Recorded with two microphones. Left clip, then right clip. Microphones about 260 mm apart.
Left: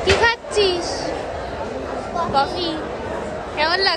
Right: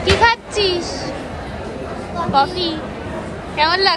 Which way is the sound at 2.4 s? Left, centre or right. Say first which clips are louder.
Right 4 dB; centre.